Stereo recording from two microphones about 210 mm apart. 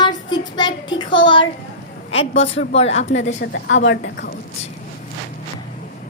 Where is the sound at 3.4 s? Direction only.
60° left (ahead or behind).